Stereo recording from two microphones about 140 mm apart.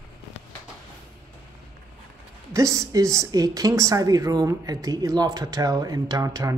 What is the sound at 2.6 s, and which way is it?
A woman's voice, 20° right (ahead or behind).